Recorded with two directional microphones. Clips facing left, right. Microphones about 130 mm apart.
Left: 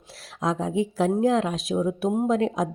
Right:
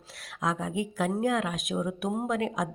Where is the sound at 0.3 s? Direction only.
35° left (ahead or behind).